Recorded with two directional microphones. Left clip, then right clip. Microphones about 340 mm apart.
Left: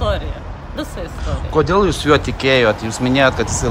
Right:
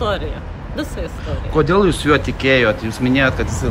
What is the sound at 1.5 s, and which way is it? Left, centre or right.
Speech, centre.